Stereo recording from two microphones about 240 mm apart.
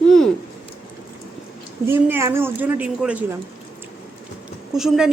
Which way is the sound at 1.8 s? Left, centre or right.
Centre.